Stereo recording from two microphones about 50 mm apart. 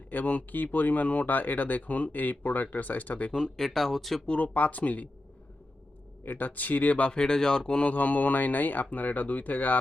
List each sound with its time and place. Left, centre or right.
0.1 s speech: left
3.3 s speech: centre
4.3 s speech: left
6.2 s speech: left
7.1 s speech: centre
7.9 s speech: left